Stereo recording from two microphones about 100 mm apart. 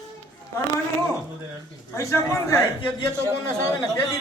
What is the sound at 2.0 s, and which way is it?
Speech, 30° left (ahead or behind).